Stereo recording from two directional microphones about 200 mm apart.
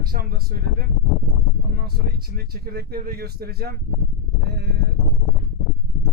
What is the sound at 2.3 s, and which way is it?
Speech, 50° right (ahead or behind).